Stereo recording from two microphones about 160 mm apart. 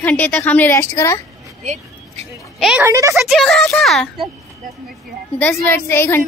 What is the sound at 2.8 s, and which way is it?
Speech, 20° right (ahead or behind).